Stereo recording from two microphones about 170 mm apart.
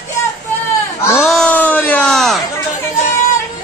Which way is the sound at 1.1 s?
Centre (ahead or behind).